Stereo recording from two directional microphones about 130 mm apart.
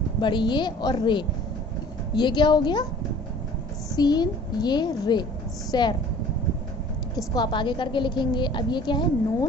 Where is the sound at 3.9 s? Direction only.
30° left (ahead or behind).